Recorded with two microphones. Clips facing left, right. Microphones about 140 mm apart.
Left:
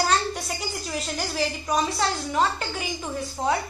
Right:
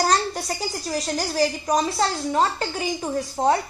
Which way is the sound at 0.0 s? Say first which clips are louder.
Right 2 dB; 35° right (ahead or behind).